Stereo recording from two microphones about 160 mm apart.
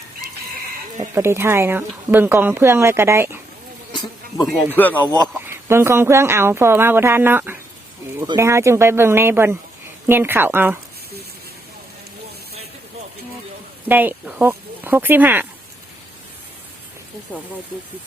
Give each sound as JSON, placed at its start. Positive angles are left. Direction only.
{"t": 1.1, "sound": "a woman's voice", "side_deg": -15}
{"t": 4.7, "sound": "a man's voice", "side_deg": 10}
{"t": 5.5, "sound": "a woman's voice", "side_deg": -15}
{"t": 13.8, "sound": "speech", "side_deg": -10}
{"t": 17.3, "sound": "speech", "side_deg": 10}